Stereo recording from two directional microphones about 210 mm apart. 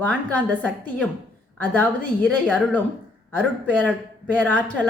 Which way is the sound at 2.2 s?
5° left (ahead or behind).